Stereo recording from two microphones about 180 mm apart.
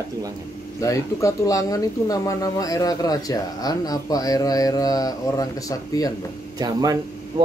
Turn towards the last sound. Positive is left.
turn(degrees=-20)  # may be behind; listen again after turning